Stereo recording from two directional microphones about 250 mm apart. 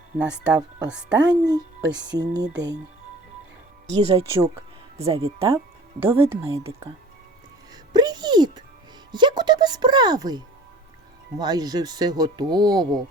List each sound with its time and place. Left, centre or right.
0.2 s a woman's voice: centre
1.3 s speech: centre
1.8 s speech: right
4.0 s speech: right
7.7 s music: centre
9.1 s speech: centre